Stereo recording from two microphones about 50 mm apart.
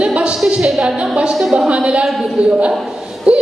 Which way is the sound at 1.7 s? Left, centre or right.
Right.